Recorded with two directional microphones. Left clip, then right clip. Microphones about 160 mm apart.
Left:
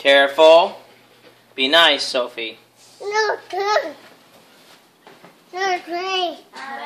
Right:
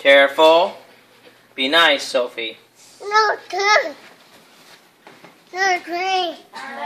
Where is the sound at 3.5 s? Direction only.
20° right (ahead or behind).